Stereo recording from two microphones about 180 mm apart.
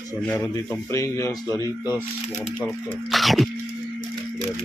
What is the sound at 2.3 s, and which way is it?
Speech, 40° left (ahead or behind).